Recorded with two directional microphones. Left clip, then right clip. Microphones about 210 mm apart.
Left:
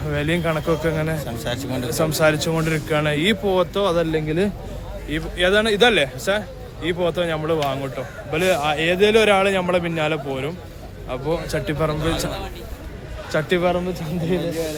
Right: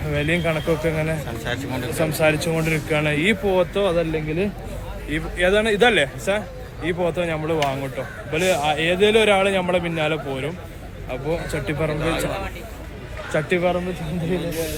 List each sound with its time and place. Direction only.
0.1 s speech: 10° left (ahead or behind)
1.5 s a man's voice: 60° left (ahead or behind)
2.0 s speech: 15° left (ahead or behind)
13.3 s speech: 15° left (ahead or behind)